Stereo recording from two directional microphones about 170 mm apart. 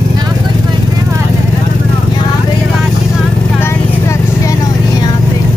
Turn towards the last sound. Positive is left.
turn(degrees=15)  # may be behind; listen again after turning